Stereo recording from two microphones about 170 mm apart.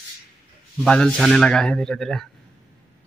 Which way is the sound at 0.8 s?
5° left (ahead or behind).